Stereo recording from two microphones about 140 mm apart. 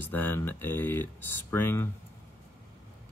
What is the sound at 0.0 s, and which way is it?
Speech, 15° left (ahead or behind).